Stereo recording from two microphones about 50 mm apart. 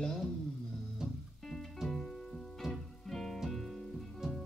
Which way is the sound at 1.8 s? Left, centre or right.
Centre.